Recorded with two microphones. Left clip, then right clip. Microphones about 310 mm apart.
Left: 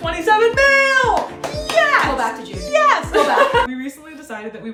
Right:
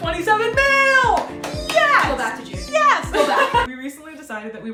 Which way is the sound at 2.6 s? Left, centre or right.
Centre.